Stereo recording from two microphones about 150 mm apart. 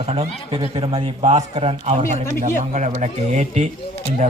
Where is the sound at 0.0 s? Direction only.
40° right (ahead or behind).